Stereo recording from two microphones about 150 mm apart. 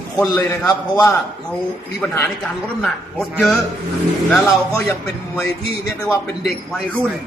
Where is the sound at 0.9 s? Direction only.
20° left (ahead or behind).